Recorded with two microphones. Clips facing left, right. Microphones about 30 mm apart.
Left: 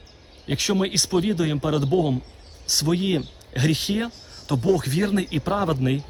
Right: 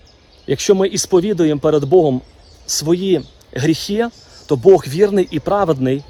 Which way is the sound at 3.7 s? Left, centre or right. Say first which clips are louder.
Right 7 dB; right.